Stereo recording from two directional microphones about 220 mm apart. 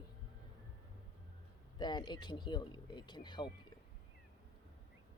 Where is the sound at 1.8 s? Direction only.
20° left (ahead or behind).